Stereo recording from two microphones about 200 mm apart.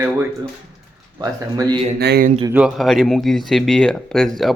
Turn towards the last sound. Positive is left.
turn(degrees=0)  # may be behind; listen again after turning